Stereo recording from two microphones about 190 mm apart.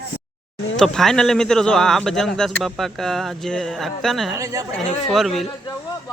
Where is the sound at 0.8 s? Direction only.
Centre (ahead or behind).